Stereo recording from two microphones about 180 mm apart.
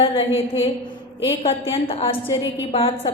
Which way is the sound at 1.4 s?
30° left (ahead or behind).